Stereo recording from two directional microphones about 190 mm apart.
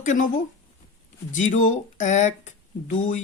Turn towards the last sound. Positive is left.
turn(degrees=40)  # may be behind; listen again after turning